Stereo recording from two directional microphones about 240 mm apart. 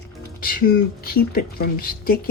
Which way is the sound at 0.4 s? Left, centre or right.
Left.